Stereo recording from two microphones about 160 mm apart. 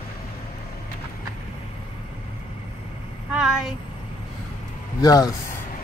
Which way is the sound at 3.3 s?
5° right (ahead or behind).